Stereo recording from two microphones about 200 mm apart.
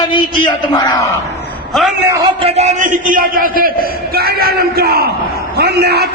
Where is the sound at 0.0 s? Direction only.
25° left (ahead or behind).